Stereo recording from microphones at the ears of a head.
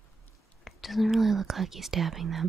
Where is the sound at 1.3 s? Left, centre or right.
Right.